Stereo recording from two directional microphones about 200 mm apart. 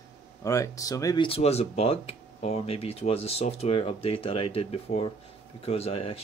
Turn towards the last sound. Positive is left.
turn(degrees=30)  # may be behind; listen again after turning